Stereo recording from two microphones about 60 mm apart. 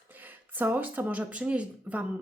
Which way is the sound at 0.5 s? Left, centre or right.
Right.